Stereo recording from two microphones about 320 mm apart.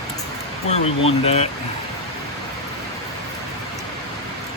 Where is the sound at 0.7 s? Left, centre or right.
Centre.